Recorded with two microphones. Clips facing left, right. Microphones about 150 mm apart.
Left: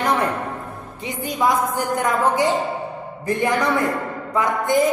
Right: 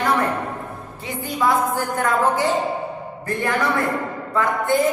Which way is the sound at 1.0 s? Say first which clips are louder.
Left 1 dB; 20° left (ahead or behind).